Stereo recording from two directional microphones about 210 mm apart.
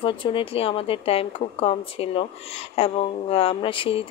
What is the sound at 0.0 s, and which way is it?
Speech, 25° left (ahead or behind).